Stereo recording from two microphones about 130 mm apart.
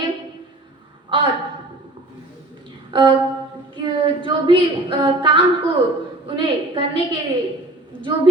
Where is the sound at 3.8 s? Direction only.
40° right (ahead or behind).